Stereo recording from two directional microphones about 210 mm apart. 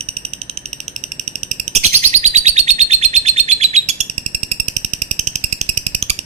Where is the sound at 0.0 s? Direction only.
30° right (ahead or behind).